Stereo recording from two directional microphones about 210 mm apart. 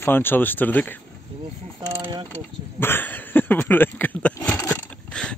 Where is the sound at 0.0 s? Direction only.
10° left (ahead or behind).